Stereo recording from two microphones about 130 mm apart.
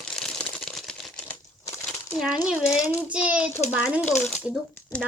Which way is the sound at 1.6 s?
25° left (ahead or behind).